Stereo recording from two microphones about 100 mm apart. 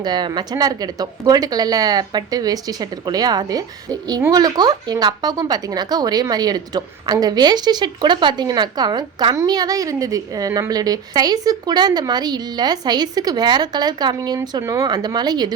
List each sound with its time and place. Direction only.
0.0 s a woman's voice: 45° right (ahead or behind)